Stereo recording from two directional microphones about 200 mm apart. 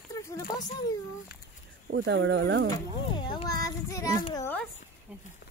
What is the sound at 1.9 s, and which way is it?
Speech, 65° right (ahead or behind).